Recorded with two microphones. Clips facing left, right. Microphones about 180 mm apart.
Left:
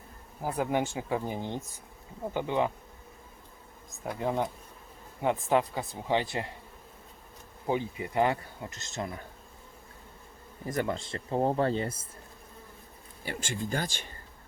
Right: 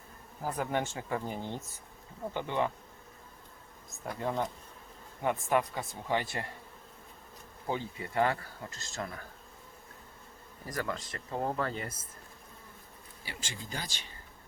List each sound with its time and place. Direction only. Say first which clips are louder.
0.4 s speech: left 4 dB; 15° left (ahead or behind)
4.2 s speech: left 3 dB; 15° left (ahead or behind)
7.7 s speech: left 5 dB; 15° left (ahead or behind)
10.7 s speech: left 5 dB; 25° left (ahead or behind)
13.2 s speech: left 10 dB; 50° left (ahead or behind)